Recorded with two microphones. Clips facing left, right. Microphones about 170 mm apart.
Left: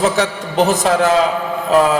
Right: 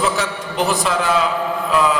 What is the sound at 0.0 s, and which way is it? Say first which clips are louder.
A man's voice: left 4 dB; 40° left (ahead or behind).